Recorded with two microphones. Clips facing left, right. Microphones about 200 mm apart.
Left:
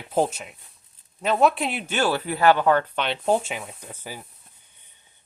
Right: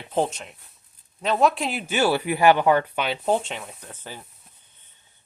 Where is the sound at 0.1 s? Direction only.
5° left (ahead or behind).